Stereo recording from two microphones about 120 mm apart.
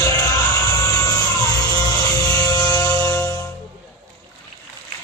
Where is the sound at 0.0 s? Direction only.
30° left (ahead or behind).